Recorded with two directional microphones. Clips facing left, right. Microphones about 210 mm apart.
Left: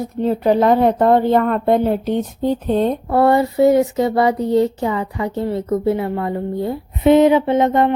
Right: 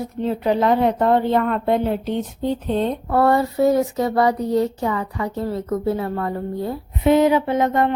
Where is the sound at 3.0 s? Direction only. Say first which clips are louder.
Left 2 dB; 25° left (ahead or behind).